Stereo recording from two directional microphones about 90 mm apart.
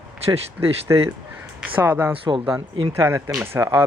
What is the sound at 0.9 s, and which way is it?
Speech, 40° right (ahead or behind).